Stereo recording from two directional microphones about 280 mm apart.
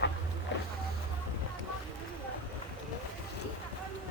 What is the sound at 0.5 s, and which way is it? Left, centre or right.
Boat, left.